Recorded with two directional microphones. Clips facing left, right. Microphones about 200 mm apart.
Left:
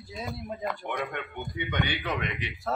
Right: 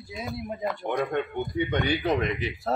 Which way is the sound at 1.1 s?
35° right (ahead or behind).